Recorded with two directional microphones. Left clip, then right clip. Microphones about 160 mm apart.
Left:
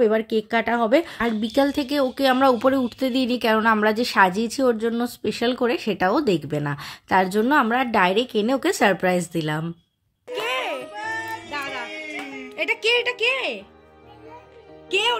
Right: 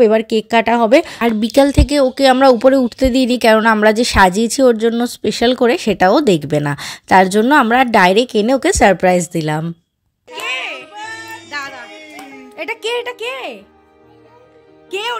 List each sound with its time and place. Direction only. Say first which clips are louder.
0.0 s a woman's voice: right 8 dB; 45° right (ahead or behind)
10.4 s a sound: right 4 dB; 30° left (ahead or behind)
11.5 s music: right 5 dB; centre (ahead or behind)
12.5 s speech: even; 15° right (ahead or behind)
14.9 s speech: even; 10° right (ahead or behind)